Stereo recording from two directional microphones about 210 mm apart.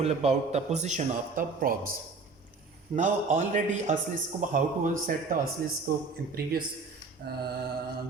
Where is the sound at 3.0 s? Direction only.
35° right (ahead or behind).